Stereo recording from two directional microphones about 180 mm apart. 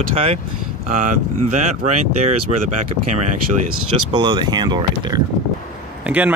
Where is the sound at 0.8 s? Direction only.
45° right (ahead or behind).